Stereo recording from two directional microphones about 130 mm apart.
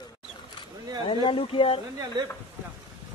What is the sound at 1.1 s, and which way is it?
Speech, 40° left (ahead or behind).